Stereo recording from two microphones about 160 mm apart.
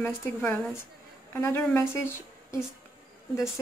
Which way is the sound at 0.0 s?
15° left (ahead or behind).